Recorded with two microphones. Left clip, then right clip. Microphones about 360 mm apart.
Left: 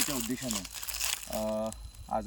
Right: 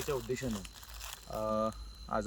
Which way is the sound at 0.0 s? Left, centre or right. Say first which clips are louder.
Left 1 dB; left.